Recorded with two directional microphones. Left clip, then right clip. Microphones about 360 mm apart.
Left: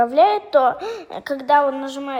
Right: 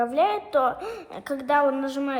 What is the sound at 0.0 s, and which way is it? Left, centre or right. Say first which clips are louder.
A woman's voice: left 8 dB; left.